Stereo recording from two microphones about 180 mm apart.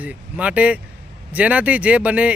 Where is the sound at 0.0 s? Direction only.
5° right (ahead or behind).